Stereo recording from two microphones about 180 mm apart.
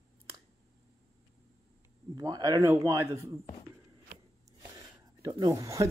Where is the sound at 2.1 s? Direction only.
20° right (ahead or behind).